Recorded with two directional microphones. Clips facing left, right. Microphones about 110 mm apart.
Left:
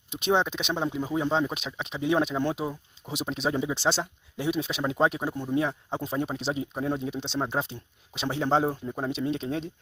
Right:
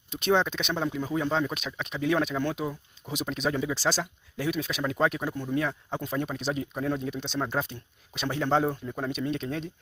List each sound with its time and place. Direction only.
0.1 s speech: 20° left (ahead or behind)